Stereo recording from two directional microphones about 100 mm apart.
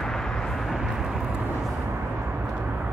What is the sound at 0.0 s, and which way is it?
Vehicle, 5° left (ahead or behind).